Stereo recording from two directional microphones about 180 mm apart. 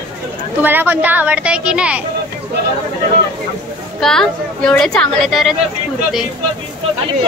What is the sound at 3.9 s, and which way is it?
A woman's voice, 5° left (ahead or behind).